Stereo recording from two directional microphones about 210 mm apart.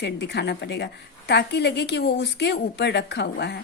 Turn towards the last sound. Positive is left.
turn(degrees=55)  # may be behind; listen again after turning